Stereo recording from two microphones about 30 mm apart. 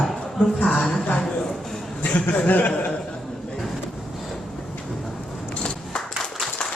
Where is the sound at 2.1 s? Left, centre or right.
Left.